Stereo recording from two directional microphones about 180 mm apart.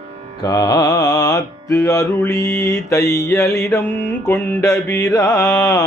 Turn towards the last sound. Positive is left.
turn(degrees=15)  # may be behind; listen again after turning